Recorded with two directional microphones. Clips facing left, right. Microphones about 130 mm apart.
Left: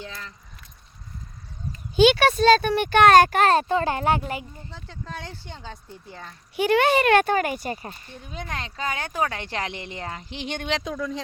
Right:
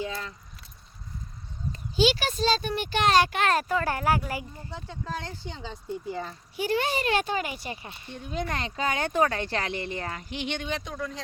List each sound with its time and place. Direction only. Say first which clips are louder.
2.0 s speech: left 7 dB; 60° left (ahead or behind); by 3.5 s 45° left (ahead or behind)
3.5 s speech: left 5 dB; 25° left (ahead or behind)
4.9 s speech: right 1 dB; centre (ahead or behind)
6.6 s speech: left 8 dB; 70° left (ahead or behind); by 8.0 s 40° left (ahead or behind)
8.3 s speech: right 3 dB; centre (ahead or behind); by 10.5 s 30° left (ahead or behind)
10.7 s speech: left 5 dB; 85° left